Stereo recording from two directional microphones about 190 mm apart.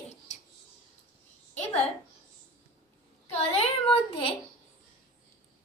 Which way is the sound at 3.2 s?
35° left (ahead or behind).